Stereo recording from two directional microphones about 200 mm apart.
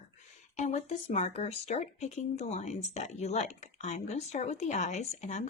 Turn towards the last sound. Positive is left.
turn(degrees=35)  # may be behind; listen again after turning